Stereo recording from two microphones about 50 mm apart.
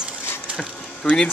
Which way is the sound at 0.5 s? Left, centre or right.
Centre.